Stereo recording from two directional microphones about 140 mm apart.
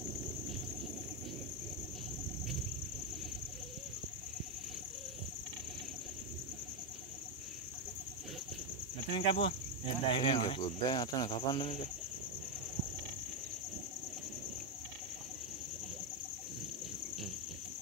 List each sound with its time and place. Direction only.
9.1 s cricket: 40° left (ahead or behind)